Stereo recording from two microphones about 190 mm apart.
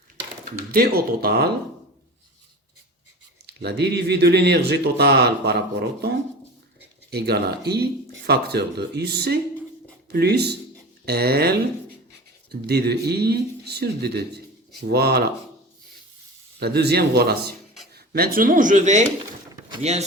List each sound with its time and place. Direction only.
0.7 s speech: 55° right (ahead or behind)
3.4 s speech: 60° right (ahead or behind)
16.6 s speech: 60° right (ahead or behind); by 20.1 s 35° right (ahead or behind)